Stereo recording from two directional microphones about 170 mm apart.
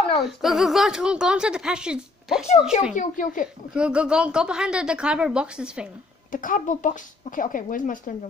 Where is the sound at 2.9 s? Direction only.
50° left (ahead or behind).